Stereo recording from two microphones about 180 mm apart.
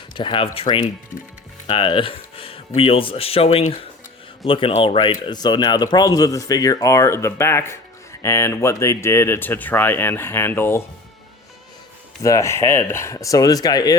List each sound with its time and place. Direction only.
0.1 s speech: 25° left (ahead or behind)
12.2 s speech: 15° left (ahead or behind)